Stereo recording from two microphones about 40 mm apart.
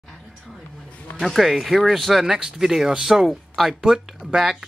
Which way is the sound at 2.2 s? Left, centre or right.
Centre.